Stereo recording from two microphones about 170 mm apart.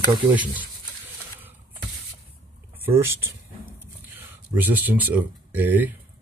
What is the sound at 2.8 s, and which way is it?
Speech, 15° right (ahead or behind).